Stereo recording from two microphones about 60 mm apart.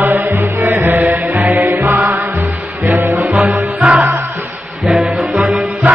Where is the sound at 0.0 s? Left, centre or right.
Right.